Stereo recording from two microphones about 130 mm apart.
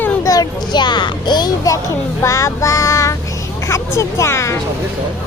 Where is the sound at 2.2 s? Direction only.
25° left (ahead or behind).